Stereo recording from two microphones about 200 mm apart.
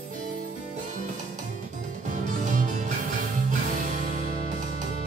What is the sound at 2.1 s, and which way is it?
Music, 40° right (ahead or behind).